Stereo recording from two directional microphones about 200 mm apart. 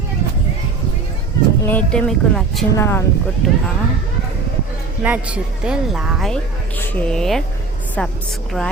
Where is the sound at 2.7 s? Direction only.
15° left (ahead or behind).